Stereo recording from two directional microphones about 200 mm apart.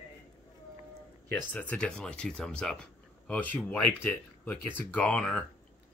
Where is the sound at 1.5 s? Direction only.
5° left (ahead or behind).